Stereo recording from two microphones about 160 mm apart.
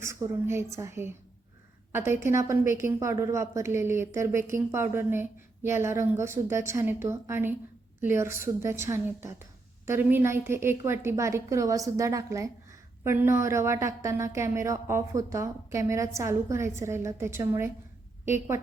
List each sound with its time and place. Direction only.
0.0 s a woman's voice: 15° right (ahead or behind)